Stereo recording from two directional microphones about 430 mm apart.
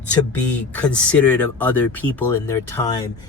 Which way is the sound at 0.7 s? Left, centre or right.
Centre.